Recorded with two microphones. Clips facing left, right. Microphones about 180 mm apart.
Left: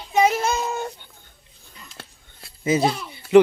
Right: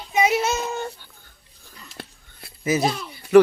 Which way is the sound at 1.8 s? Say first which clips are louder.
Right 6 dB; 20° right (ahead or behind).